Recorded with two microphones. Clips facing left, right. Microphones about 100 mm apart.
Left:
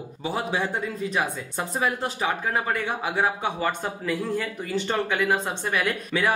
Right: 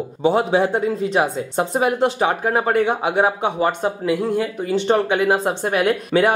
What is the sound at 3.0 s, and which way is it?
Speech, 70° right (ahead or behind).